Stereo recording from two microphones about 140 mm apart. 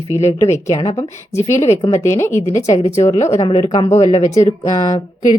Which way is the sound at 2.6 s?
55° left (ahead or behind).